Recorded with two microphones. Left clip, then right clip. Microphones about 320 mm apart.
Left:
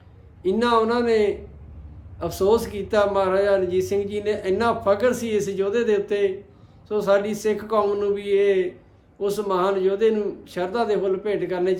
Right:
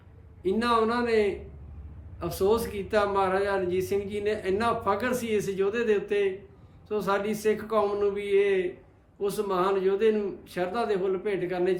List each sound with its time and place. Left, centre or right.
0.4 s speech: centre